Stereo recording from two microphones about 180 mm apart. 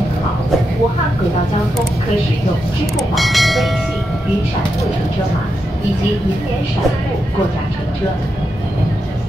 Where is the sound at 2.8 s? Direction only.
Centre (ahead or behind).